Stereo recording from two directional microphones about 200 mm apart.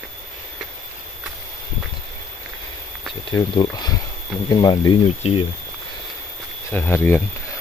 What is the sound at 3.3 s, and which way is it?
Speech, 20° left (ahead or behind).